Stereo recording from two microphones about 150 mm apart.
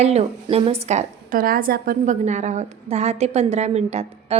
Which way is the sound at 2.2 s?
50° right (ahead or behind).